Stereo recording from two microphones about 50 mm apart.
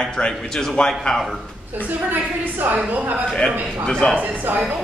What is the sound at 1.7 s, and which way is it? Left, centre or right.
A woman's voice, right.